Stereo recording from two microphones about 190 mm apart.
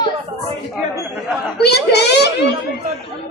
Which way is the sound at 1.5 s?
60° left (ahead or behind).